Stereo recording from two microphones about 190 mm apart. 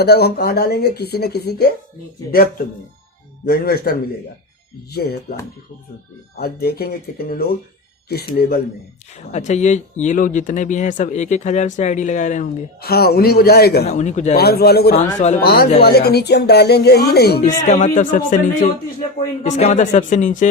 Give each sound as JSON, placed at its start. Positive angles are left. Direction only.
{"t": 0.0, "sound": "speech", "side_deg": 55}
{"t": 6.3, "sound": "speech", "side_deg": 55}
{"t": 9.3, "sound": "speech", "side_deg": 35}
{"t": 13.8, "sound": "speech", "side_deg": 35}
{"t": 14.3, "sound": "speech", "side_deg": 55}
{"t": 17.4, "sound": "speech", "side_deg": 40}